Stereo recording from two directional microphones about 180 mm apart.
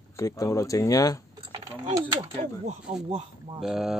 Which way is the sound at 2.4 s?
40° right (ahead or behind).